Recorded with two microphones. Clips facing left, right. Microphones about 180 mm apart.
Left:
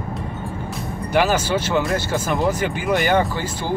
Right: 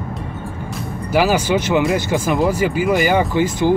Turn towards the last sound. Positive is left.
turn(degrees=-15)  # may be behind; listen again after turning